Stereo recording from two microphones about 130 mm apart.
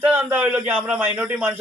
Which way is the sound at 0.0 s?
15° right (ahead or behind).